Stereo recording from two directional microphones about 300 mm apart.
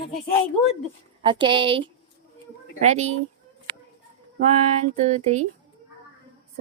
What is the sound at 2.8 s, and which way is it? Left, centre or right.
Music, right.